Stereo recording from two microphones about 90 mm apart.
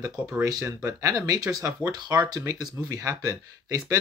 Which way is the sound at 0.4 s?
40° right (ahead or behind).